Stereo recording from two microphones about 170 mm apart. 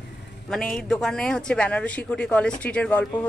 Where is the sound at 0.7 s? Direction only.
5° left (ahead or behind).